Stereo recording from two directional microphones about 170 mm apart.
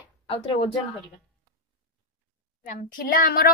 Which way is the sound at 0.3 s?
35° left (ahead or behind).